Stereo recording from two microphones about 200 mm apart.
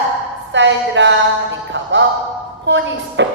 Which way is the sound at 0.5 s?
65° right (ahead or behind).